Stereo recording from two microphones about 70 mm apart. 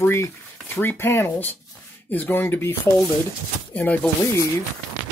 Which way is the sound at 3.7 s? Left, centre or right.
Left.